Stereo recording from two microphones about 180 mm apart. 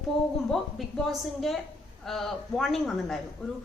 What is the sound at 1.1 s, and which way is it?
A woman's voice, centre (ahead or behind).